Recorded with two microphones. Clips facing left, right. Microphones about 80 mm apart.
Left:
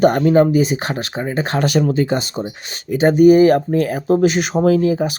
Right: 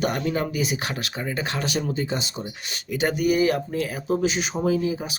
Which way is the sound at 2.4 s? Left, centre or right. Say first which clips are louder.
Left 7 dB; left.